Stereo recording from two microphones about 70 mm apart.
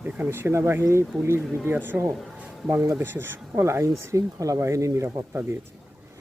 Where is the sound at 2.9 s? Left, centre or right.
Right.